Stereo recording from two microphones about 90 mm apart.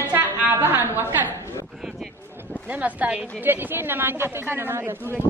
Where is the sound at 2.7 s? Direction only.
15° right (ahead or behind).